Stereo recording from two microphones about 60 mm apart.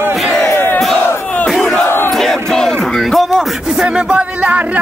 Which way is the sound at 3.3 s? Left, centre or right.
Centre.